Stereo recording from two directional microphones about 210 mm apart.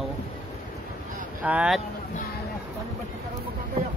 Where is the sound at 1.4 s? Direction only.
5° right (ahead or behind).